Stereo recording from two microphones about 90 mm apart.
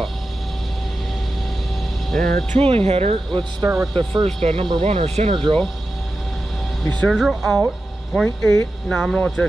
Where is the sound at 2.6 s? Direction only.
90° right.